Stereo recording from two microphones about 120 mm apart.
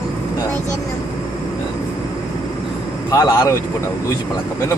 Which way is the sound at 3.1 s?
30° left (ahead or behind).